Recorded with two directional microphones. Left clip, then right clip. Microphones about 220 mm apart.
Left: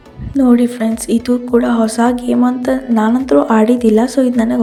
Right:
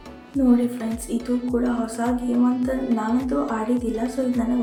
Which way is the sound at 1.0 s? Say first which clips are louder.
Left 10 dB; 40° left (ahead or behind).